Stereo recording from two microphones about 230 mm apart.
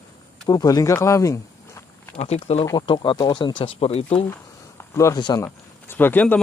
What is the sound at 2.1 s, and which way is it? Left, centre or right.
Speech, left.